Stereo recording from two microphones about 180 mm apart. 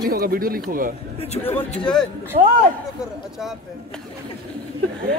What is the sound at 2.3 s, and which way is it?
Speech, 45° right (ahead or behind).